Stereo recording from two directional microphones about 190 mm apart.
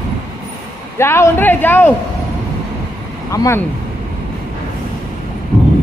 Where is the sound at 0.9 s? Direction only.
15° left (ahead or behind).